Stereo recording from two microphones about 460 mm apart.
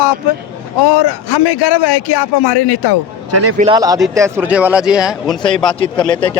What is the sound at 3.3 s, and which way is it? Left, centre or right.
Speech, right.